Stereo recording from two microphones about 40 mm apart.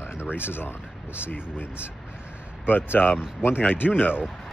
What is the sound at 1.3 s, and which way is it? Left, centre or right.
Speech, left.